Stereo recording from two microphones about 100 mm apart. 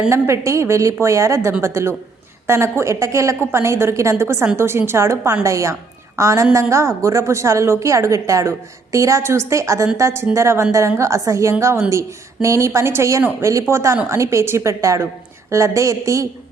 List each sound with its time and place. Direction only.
0.1 s a woman's voice: 30° right (ahead or behind)